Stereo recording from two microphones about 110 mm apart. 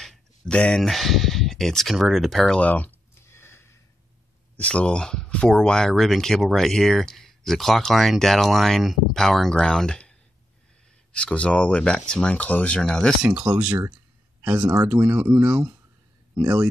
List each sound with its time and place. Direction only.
0.0 s a sound: 5° left (ahead or behind); by 3.8 s 20° left (ahead or behind)
4.6 s speech: 10° left (ahead or behind)
11.1 s speech: 10° left (ahead or behind)
13.2 s speech: 10° right (ahead or behind)